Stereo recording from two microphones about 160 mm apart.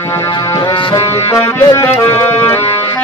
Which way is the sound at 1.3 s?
15° left (ahead or behind).